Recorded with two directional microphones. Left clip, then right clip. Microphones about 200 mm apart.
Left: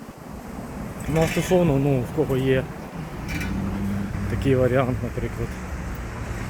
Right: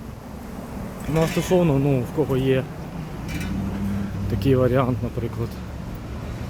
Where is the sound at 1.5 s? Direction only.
10° right (ahead or behind).